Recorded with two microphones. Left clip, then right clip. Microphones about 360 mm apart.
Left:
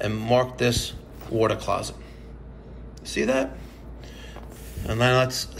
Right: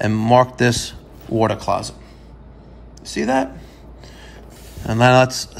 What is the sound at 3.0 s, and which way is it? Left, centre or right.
Speech, centre.